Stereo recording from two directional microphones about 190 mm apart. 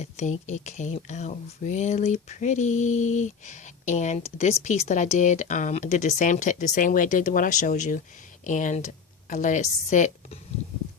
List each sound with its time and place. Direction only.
0.0 s speech: 35° left (ahead or behind)